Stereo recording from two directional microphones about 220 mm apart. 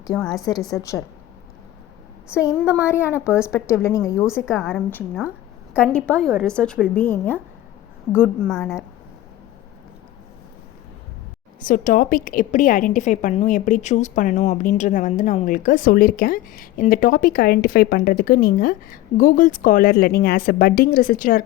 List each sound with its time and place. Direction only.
0.2 s a woman's voice: centre (ahead or behind)
0.8 s a woman's voice: 15° left (ahead or behind)
2.6 s a woman's voice: 5° right (ahead or behind)
2.8 s a woman's voice: 10° left (ahead or behind)
4.3 s a woman's voice: 5° right (ahead or behind)
8.4 s a woman's voice: centre (ahead or behind)
11.6 s a woman's voice: 40° left (ahead or behind)